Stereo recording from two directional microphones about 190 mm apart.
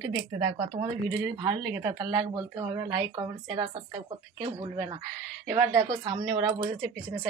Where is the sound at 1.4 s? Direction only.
20° right (ahead or behind).